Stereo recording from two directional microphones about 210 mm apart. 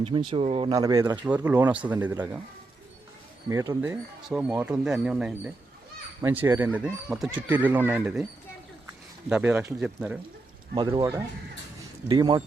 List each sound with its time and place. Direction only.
0.0 s speech: 25° right (ahead or behind)
3.5 s speech: 15° right (ahead or behind)
9.3 s speech: 10° right (ahead or behind)
10.8 s speech: 20° right (ahead or behind)